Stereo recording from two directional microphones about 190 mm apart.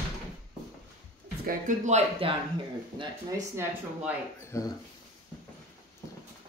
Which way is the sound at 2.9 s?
15° right (ahead or behind).